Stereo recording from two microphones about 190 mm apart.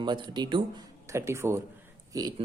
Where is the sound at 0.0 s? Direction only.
25° right (ahead or behind).